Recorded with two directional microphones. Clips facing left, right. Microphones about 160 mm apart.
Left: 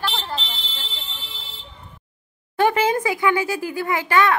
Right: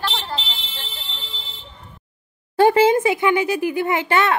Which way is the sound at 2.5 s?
30° right (ahead or behind).